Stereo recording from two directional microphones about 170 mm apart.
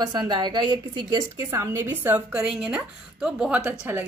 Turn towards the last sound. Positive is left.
turn(degrees=-10)  # may be behind; listen again after turning